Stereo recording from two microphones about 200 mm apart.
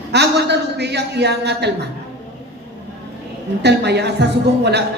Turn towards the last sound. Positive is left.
turn(degrees=-55)  # may be behind; listen again after turning